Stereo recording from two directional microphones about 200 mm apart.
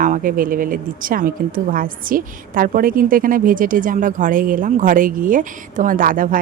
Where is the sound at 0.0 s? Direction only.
45° right (ahead or behind).